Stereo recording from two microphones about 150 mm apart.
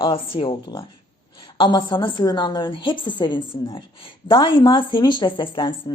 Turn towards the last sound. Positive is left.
turn(degrees=35)  # may be behind; listen again after turning